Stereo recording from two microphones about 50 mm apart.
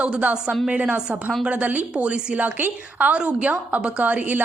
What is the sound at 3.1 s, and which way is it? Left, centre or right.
A woman's voice, right.